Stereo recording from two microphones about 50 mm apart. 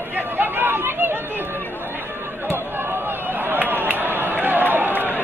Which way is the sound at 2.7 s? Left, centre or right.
Right.